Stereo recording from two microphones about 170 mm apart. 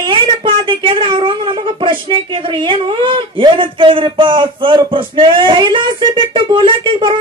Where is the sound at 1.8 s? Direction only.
30° right (ahead or behind).